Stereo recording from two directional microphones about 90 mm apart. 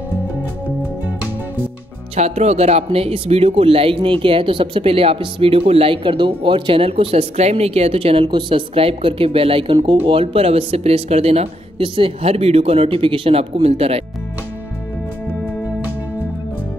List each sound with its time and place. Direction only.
2.9 s speech: 90° right
11.8 s speech: 75° right (ahead or behind)